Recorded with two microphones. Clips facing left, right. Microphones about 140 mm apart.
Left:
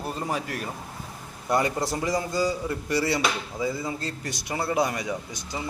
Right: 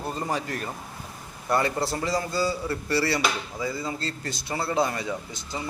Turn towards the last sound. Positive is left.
turn(degrees=15)  # may be behind; listen again after turning